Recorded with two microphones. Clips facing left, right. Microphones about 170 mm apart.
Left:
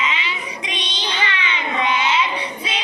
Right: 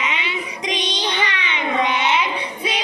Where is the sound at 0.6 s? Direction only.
40° right (ahead or behind).